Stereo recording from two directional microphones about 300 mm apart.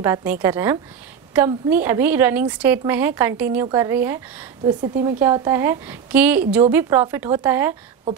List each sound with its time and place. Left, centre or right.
0.0 s a woman's voice: centre